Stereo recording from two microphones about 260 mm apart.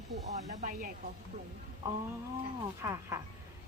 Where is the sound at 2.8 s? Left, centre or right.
Centre.